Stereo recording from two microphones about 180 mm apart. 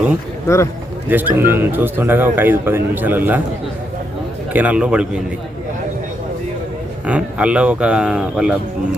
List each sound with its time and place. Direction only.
0.4 s speech: 15° left (ahead or behind)
1.0 s speech: 10° right (ahead or behind)
4.5 s speech: 5° right (ahead or behind)
7.0 s speech: 5° right (ahead or behind)